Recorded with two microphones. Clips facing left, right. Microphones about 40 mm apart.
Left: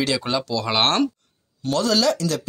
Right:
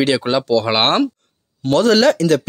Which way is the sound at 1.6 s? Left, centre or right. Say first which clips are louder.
Right 7 dB; right.